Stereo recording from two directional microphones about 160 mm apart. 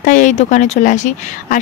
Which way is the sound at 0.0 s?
50° left (ahead or behind).